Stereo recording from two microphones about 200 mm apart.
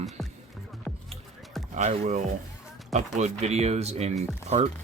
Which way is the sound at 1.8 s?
35° right (ahead or behind).